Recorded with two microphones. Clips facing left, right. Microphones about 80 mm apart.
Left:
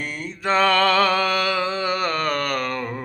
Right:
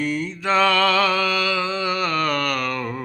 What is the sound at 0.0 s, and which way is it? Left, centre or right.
Mantra, left.